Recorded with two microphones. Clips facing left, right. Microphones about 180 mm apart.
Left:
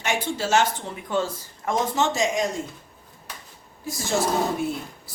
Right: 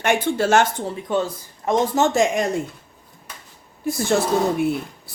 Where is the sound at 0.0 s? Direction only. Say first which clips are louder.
Right 7 dB; 55° right (ahead or behind).